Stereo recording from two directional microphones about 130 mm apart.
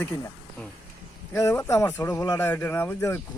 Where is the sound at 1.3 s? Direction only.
20° left (ahead or behind).